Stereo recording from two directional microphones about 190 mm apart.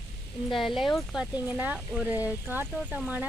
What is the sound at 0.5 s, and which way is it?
Speech, centre (ahead or behind).